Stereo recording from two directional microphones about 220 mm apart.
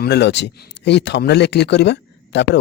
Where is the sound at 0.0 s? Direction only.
50° left (ahead or behind).